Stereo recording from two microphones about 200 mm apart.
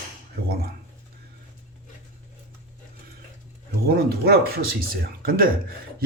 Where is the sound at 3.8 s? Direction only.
50° right (ahead or behind).